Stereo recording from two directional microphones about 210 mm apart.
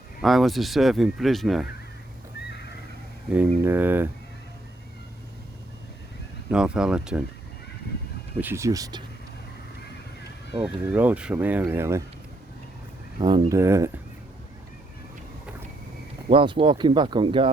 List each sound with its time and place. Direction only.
0.2 s speech: centre (ahead or behind)
3.2 s speech: 5° right (ahead or behind)
6.5 s speech: 5° right (ahead or behind)
8.4 s speech: 10° right (ahead or behind)
10.6 s speech: 5° right (ahead or behind)
13.1 s speech: 20° right (ahead or behind)
16.3 s speech: 25° right (ahead or behind)